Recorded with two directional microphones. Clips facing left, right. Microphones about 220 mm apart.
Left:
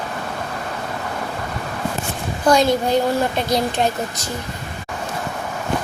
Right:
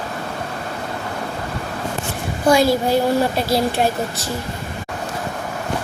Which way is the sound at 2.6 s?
5° right (ahead or behind).